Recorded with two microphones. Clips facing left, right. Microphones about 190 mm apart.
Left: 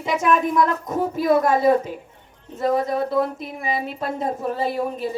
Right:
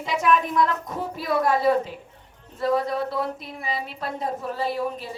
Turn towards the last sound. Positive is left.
turn(degrees=50)  # may be behind; listen again after turning